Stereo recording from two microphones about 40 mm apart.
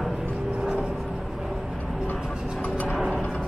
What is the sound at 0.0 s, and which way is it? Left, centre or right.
Music, centre.